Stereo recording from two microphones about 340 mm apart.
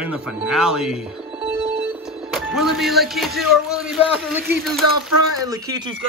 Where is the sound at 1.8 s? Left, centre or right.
Centre.